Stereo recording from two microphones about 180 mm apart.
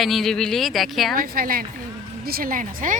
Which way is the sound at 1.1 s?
50° right (ahead or behind).